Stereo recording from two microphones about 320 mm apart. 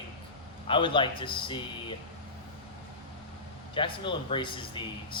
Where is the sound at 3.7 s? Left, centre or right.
Centre.